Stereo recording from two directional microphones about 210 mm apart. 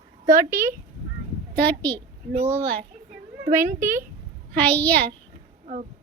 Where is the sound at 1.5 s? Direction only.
10° left (ahead or behind).